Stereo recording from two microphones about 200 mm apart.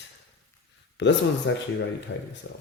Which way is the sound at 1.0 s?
65° left (ahead or behind).